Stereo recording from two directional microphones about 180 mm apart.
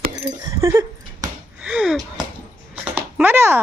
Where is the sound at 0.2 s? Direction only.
15° right (ahead or behind).